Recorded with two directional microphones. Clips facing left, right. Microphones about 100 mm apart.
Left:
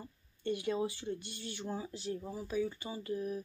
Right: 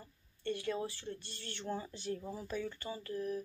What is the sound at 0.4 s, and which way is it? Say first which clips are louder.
Speech: left 3 dB; 15° left (ahead or behind).